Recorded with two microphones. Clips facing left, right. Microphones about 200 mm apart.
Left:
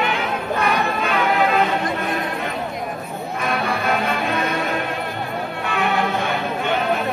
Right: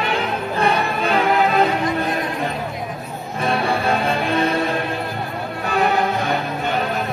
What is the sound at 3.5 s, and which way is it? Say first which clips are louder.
Music: right 3 dB; 30° right (ahead or behind).